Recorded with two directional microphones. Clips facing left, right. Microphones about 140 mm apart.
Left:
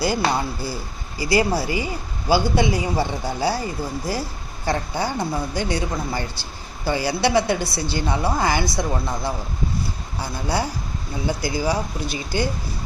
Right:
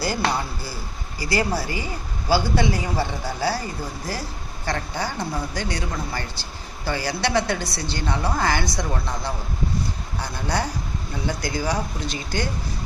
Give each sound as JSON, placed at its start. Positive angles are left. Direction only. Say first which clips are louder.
{"t": 0.0, "sound": "a woman's voice", "louder": "left 3 dB", "side_deg": 15}